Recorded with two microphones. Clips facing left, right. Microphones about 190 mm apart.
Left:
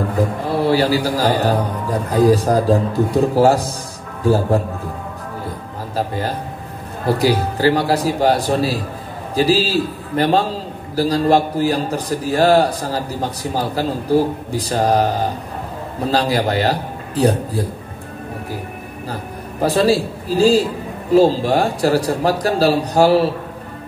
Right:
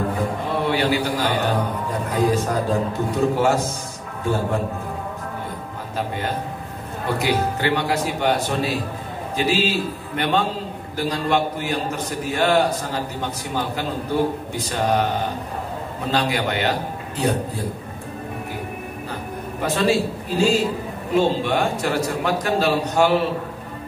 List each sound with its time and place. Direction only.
0.5 s a man's voice: 35° left (ahead or behind)
5.9 s a man's voice: 35° left (ahead or behind)
16.1 s a man's voice: 35° left (ahead or behind)
19.6 s a man's voice: 35° left (ahead or behind)